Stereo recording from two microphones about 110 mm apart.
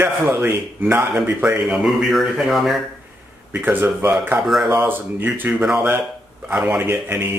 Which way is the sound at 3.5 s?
15° right (ahead or behind).